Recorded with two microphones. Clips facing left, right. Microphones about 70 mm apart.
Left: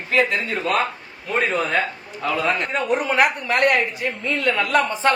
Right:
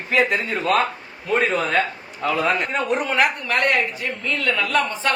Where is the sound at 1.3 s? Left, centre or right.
Centre.